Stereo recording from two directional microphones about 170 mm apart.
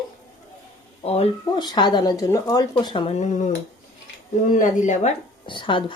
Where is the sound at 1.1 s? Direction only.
35° left (ahead or behind).